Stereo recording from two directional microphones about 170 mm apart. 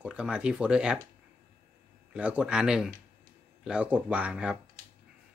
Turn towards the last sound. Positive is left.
turn(degrees=-5)  # may be behind; listen again after turning